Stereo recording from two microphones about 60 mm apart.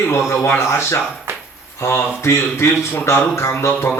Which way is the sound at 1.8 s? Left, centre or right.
Left.